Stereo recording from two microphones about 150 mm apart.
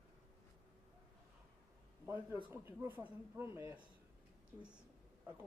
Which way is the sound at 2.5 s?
15° right (ahead or behind).